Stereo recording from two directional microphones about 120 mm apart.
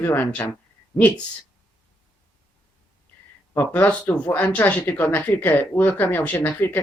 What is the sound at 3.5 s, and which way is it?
Speech, 15° left (ahead or behind).